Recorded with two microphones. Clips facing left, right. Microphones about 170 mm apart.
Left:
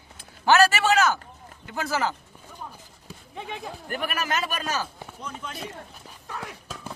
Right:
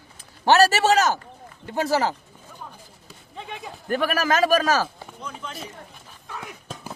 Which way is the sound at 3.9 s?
90° right.